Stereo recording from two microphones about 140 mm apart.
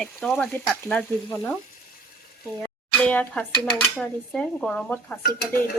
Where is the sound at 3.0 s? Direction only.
10° left (ahead or behind).